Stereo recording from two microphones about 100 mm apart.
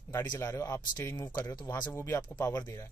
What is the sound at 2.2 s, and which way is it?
Speech, 35° left (ahead or behind).